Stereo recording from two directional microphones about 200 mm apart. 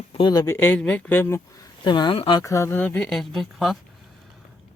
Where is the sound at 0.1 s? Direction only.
20° left (ahead or behind).